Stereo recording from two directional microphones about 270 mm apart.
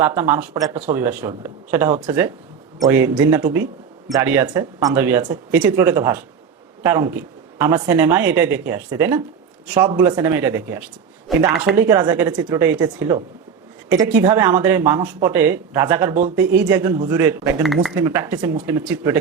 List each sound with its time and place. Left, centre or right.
0.0 s speech: centre
11.8 s speech: centre